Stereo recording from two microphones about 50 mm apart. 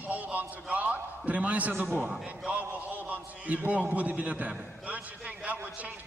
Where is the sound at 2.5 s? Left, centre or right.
Right.